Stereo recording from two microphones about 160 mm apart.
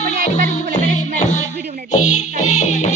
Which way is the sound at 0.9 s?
50° left (ahead or behind).